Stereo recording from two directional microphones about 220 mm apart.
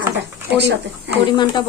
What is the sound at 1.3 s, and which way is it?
Speech, 20° left (ahead or behind).